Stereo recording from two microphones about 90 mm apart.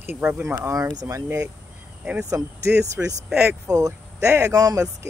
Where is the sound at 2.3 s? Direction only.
35° right (ahead or behind).